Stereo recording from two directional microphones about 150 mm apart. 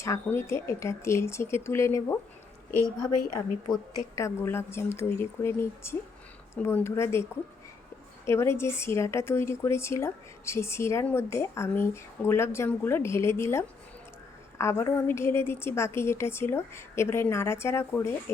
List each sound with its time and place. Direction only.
0.0 s a woman's voice: 15° left (ahead or behind)
4.1 s a woman's voice: 20° left (ahead or behind)
8.3 s a woman's voice: 15° left (ahead or behind)